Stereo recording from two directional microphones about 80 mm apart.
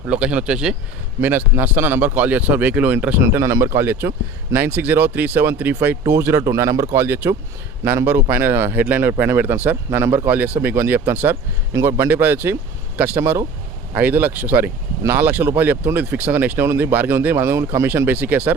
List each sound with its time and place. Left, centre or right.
0.0 s speech: centre
1.2 s speech: right
3.2 s speech: right
11.7 s speech: right
12.1 s speech: right